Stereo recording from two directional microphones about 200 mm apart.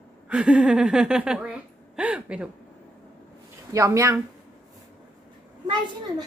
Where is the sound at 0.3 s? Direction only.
5° right (ahead or behind).